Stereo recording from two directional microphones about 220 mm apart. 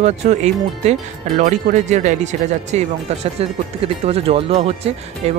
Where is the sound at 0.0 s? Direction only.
30° right (ahead or behind).